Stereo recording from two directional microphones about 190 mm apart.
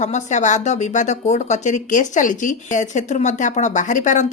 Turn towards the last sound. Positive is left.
turn(degrees=40)  # may be behind; listen again after turning